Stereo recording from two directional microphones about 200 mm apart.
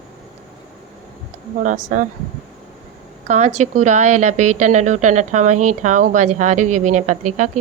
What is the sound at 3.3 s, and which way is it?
A woman's voice, 35° right (ahead or behind).